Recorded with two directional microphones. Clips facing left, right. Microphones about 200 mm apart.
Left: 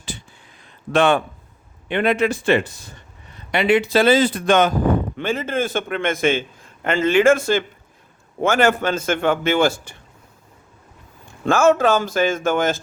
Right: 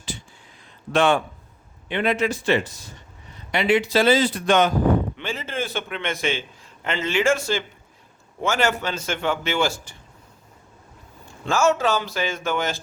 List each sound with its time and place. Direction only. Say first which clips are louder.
0.9 s a man's voice: left 2 dB; 60° left (ahead or behind)
11.4 s a man's voice: left 5 dB; 55° left (ahead or behind)